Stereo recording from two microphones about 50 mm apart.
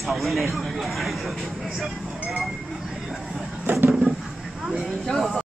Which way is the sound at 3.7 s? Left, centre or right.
Right.